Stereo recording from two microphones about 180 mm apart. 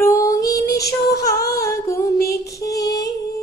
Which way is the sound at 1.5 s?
15° left (ahead or behind).